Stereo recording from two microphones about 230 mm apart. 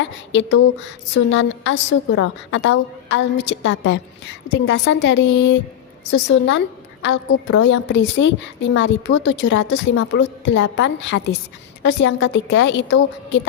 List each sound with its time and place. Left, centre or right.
0.3 s a woman's voice: left